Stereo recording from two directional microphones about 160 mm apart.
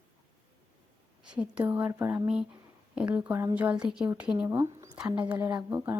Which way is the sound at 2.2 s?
5° right (ahead or behind).